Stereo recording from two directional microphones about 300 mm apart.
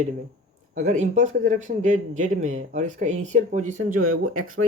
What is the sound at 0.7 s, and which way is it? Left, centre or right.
Speech, right.